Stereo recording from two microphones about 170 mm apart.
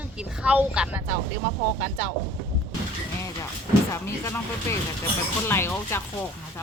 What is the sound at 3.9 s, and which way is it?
Speech, 15° left (ahead or behind).